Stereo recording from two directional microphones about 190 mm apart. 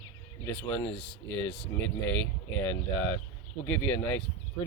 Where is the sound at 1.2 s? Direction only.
65° left (ahead or behind).